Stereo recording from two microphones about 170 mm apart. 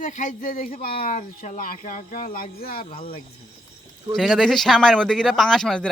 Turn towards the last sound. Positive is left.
turn(degrees=5)  # may be behind; listen again after turning